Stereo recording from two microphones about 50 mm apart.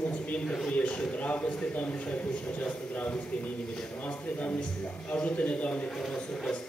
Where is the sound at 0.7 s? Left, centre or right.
Left.